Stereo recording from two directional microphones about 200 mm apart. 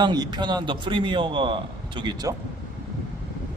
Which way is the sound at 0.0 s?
20° right (ahead or behind).